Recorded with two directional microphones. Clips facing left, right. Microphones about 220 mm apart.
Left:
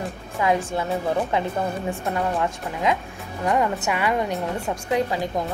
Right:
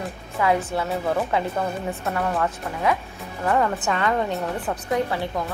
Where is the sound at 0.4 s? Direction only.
25° left (ahead or behind).